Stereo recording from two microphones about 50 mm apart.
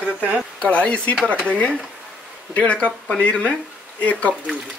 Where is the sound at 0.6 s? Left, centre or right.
Left.